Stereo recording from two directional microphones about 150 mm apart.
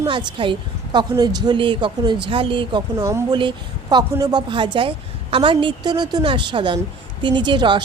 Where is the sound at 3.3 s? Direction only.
30° right (ahead or behind).